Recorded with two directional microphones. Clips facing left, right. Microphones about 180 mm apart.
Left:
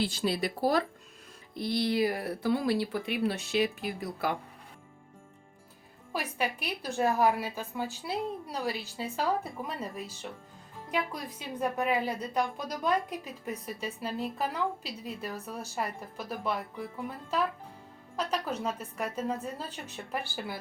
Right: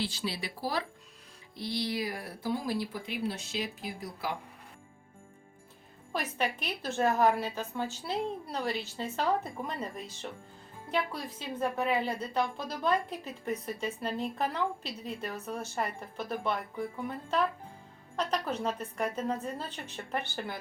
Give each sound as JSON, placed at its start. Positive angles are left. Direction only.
{"t": 0.0, "sound": "speech", "side_deg": 50}
{"t": 6.1, "sound": "a woman's voice", "side_deg": 10}
{"t": 18.2, "sound": "a woman's voice", "side_deg": 5}